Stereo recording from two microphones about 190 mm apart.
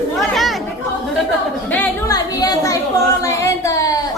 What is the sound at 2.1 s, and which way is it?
Speech, 20° left (ahead or behind).